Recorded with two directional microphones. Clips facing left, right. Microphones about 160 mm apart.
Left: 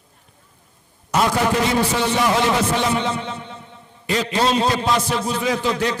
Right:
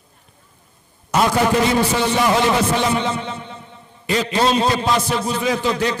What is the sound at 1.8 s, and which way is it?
Speech, 5° right (ahead or behind).